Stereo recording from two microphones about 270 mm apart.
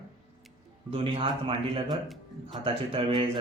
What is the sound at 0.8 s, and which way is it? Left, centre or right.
Speech, right.